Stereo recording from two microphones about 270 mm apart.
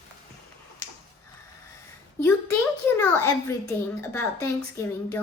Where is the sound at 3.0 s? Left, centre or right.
Centre.